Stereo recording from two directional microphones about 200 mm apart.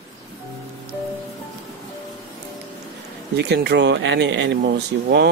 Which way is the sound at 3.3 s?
55° right (ahead or behind).